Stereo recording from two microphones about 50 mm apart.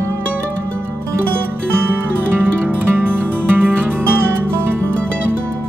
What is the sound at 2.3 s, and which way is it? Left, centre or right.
Music, right.